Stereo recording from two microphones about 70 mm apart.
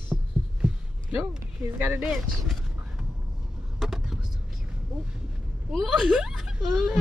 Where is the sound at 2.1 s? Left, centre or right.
Centre.